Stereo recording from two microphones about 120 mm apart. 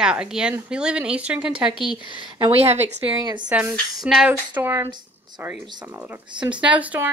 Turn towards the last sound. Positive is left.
turn(degrees=-10)  # may be behind; listen again after turning